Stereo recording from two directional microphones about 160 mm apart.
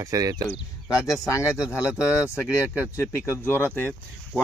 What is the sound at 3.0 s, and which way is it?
Speech, 15° left (ahead or behind).